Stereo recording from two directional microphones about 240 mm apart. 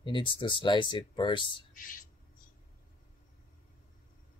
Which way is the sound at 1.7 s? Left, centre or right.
Left.